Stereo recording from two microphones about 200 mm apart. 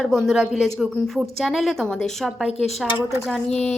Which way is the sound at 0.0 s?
Centre (ahead or behind).